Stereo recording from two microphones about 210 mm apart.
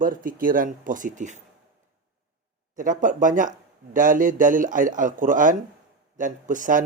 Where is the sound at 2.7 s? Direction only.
40° right (ahead or behind).